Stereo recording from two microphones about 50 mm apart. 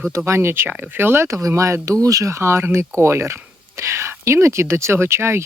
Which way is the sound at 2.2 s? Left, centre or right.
Right.